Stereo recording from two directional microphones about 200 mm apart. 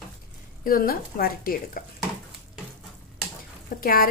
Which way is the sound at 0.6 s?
45° left (ahead or behind).